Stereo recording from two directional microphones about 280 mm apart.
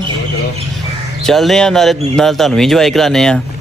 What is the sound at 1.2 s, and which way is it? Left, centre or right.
Speech, centre.